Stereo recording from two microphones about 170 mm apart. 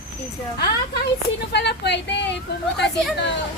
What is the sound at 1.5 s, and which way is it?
Speech, 80° left.